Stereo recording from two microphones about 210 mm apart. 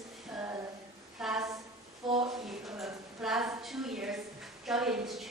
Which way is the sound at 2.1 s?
25° right (ahead or behind).